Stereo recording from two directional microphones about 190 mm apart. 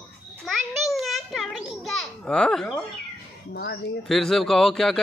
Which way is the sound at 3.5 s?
65° left (ahead or behind).